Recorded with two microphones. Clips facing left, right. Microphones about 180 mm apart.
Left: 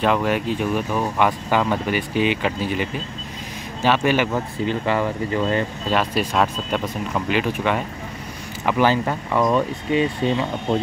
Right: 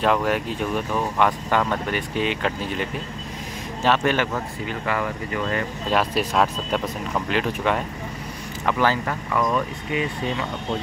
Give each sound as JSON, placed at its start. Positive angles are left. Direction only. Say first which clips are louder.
{"t": 0.0, "sound": "speech", "louder": "left 1 dB", "side_deg": 0}
{"t": 4.6, "sound": "speech", "louder": "left 5 dB", "side_deg": 25}
{"t": 5.9, "sound": "speech", "louder": "right 1 dB", "side_deg": 0}
{"t": 8.6, "sound": "speech", "louder": "left 3 dB", "side_deg": 20}